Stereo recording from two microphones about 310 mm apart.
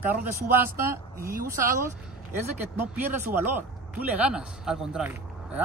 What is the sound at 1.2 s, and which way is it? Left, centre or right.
Speech, right.